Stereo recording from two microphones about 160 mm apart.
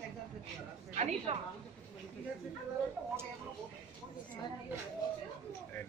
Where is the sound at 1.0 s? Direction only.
45° right (ahead or behind).